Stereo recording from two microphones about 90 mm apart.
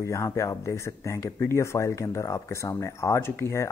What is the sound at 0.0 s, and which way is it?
Speech, 30° left (ahead or behind).